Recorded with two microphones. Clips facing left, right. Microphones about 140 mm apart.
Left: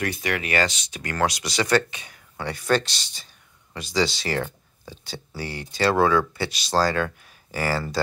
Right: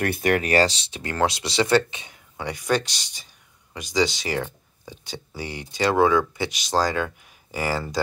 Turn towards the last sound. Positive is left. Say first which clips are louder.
# left 1 dB
turn(degrees=-15)  # may be behind; listen again after turning